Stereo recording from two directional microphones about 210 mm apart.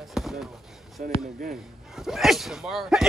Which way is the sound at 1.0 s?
40° right (ahead or behind).